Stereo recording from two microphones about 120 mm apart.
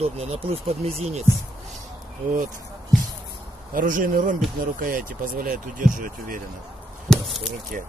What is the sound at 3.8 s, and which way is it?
Speech, 90° right.